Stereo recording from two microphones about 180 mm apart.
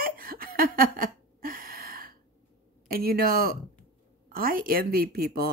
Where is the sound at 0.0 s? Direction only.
55° right (ahead or behind).